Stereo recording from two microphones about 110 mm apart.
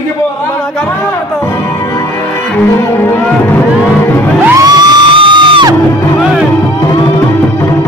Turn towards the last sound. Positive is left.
turn(degrees=-5)  # may be behind; listen again after turning